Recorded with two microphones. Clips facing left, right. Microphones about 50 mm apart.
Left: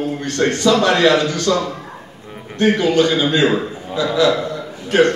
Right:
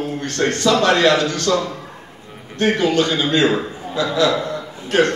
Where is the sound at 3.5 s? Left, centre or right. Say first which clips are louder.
Left 1 dB; centre.